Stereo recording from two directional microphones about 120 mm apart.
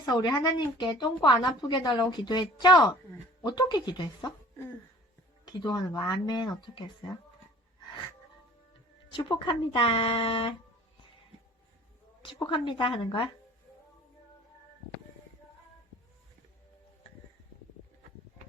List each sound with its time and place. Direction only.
0.0 s a woman's voice: 35° left (ahead or behind)
5.5 s a woman's voice: 35° left (ahead or behind)
9.1 s speech: 40° left (ahead or behind)
12.2 s speech: 45° left (ahead or behind)